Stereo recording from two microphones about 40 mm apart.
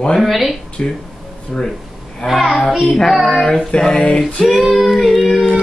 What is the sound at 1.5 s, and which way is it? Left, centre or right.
Female singing, left.